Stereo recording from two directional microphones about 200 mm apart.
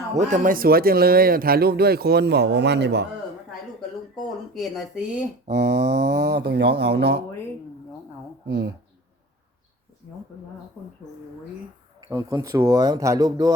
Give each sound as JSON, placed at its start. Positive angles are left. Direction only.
{"t": 0.1, "sound": "speech", "side_deg": -35}
{"t": 4.5, "sound": "speech", "side_deg": 0}
{"t": 5.5, "sound": "speech", "side_deg": -55}
{"t": 8.4, "sound": "speech", "side_deg": -55}
{"t": 11.9, "sound": "speech", "side_deg": -15}